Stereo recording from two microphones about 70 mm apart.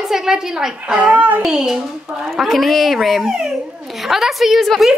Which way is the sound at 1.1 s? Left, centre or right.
Right.